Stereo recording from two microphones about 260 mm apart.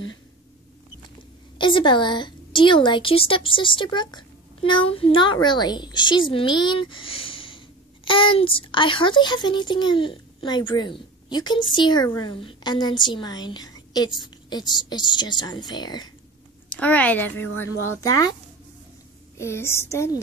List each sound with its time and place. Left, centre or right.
1.6 s a woman's voice: centre
16.6 s a woman's voice: centre
19.3 s a woman's voice: centre